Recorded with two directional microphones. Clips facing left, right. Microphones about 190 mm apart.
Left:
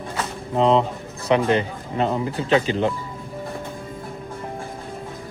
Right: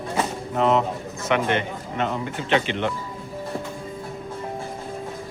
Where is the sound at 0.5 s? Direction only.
30° left (ahead or behind).